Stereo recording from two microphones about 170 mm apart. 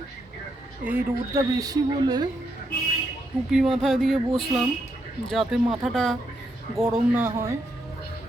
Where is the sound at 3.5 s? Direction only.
Centre (ahead or behind).